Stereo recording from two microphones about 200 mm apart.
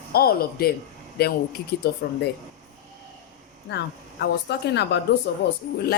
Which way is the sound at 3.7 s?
60° left (ahead or behind).